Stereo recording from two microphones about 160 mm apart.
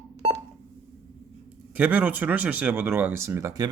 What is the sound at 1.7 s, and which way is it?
Speech, 10° right (ahead or behind).